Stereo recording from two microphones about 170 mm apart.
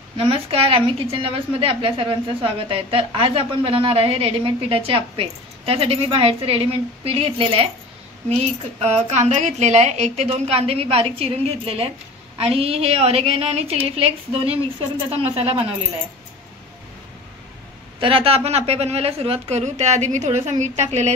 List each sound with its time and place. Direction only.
0.2 s a woman's voice: 35° right (ahead or behind)
18.0 s a woman's voice: 35° right (ahead or behind)